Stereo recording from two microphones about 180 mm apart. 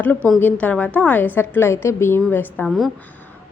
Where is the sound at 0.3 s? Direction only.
10° left (ahead or behind).